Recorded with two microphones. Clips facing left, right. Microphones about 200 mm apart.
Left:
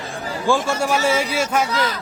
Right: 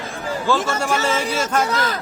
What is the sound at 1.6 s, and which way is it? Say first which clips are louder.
Speech: even; 45° right (ahead or behind).